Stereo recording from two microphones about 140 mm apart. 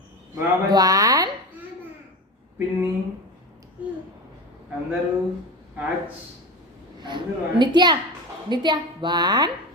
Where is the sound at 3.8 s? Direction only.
10° right (ahead or behind).